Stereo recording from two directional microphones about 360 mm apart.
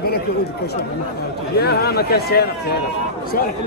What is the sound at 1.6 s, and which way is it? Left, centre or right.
A man's voice, left.